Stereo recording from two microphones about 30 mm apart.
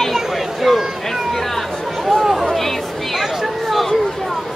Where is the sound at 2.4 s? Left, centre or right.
Centre.